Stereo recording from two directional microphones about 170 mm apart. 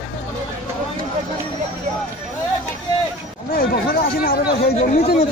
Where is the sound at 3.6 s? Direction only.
60° left (ahead or behind).